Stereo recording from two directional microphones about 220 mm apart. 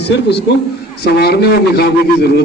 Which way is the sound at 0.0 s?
50° left (ahead or behind).